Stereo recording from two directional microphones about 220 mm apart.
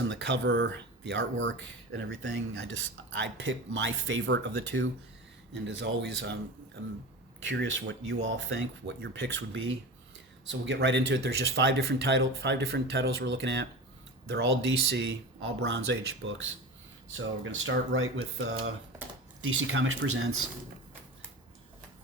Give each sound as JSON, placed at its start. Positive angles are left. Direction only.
{"t": 0.1, "sound": "speech", "side_deg": -55}
{"t": 5.5, "sound": "speech", "side_deg": -55}
{"t": 7.4, "sound": "speech", "side_deg": -55}